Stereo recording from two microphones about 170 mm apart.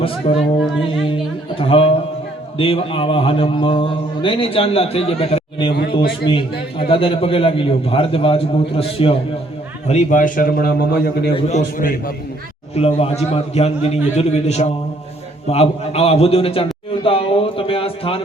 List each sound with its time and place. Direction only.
0.0 s a man's voice: 35° left (ahead or behind)
9.8 s a man's voice: 45° left (ahead or behind); by 11.3 s 70° left (ahead or behind)
11.3 s a man's voice: 40° left (ahead or behind)
12.7 s a man's voice: 35° left (ahead or behind)